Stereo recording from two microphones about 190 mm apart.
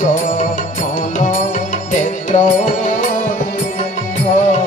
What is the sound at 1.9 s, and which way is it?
Music, 40° left (ahead or behind).